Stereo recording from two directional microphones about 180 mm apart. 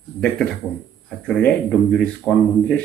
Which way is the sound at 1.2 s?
5° left (ahead or behind).